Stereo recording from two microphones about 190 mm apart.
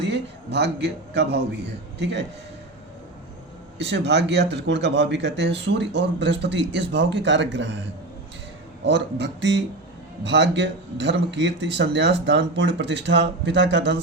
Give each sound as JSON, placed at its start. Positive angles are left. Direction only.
{"t": 0.0, "sound": "a man's voice", "side_deg": -60}
{"t": 3.8, "sound": "a man's voice", "side_deg": -65}
{"t": 8.8, "sound": "a man's voice", "side_deg": -65}